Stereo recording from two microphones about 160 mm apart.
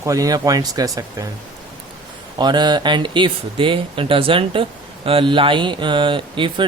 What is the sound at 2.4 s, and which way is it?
Speech, 25° right (ahead or behind).